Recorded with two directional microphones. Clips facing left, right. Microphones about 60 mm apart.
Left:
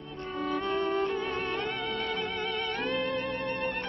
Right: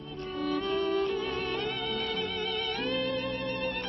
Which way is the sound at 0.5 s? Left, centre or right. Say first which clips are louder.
Even; left.